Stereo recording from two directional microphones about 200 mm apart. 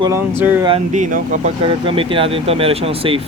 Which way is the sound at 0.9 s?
40° right (ahead or behind).